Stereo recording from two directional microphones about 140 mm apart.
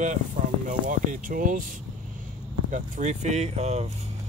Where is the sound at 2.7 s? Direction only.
60° right (ahead or behind).